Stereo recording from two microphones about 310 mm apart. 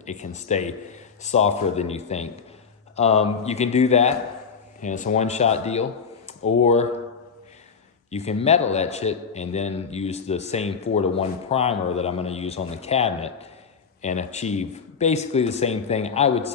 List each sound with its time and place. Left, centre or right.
0.0 s a man's voice: left
8.1 s a man's voice: left